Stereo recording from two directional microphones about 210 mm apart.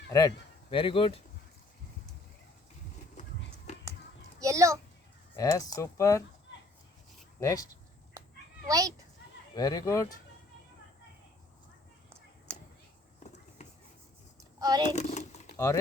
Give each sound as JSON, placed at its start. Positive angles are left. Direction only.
{"t": 0.1, "sound": "speech", "side_deg": 15}
{"t": 3.7, "sound": "a sound", "side_deg": 35}
{"t": 4.4, "sound": "children playing", "side_deg": -15}
{"t": 5.4, "sound": "speech", "side_deg": 15}
{"t": 7.3, "sound": "speech", "side_deg": 15}
{"t": 8.6, "sound": "speech", "side_deg": -15}
{"t": 9.6, "sound": "speech", "side_deg": 15}
{"t": 14.6, "sound": "a child's voice", "side_deg": -20}
{"t": 14.8, "sound": "a sound", "side_deg": 35}
{"t": 15.5, "sound": "speech", "side_deg": 15}